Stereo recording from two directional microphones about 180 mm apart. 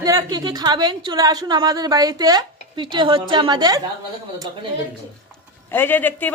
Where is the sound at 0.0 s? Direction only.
20° right (ahead or behind).